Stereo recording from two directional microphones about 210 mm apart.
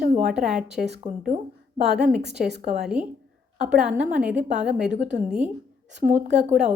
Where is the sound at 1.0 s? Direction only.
35° right (ahead or behind).